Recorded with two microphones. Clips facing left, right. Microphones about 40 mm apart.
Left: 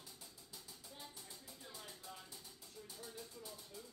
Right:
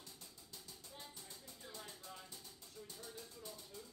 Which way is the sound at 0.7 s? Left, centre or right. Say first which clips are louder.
Even; centre.